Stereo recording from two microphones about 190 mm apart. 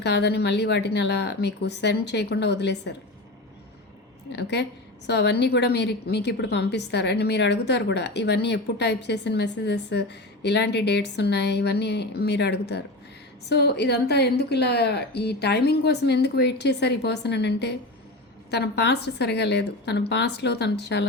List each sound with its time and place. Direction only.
0.0 s a woman's voice: 65° left (ahead or behind)
4.3 s a woman's voice: 60° left (ahead or behind)